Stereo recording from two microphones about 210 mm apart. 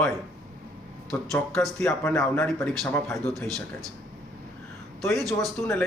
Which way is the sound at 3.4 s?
15° right (ahead or behind).